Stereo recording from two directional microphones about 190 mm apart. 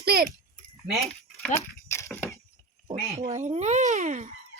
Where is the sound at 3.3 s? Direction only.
35° right (ahead or behind).